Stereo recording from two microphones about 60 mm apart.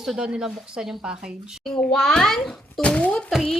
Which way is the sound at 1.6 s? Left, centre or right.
Centre.